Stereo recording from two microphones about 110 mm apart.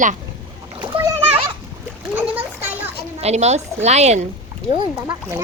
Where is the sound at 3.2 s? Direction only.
85° right.